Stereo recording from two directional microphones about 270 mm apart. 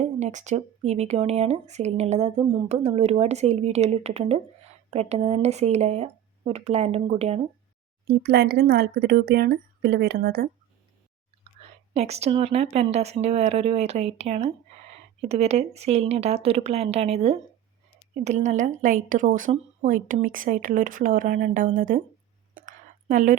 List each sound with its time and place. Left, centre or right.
0.0 s speech: right
8.0 s speech: right
11.6 s whispering: right
11.9 s speech: right
22.6 s a sound: right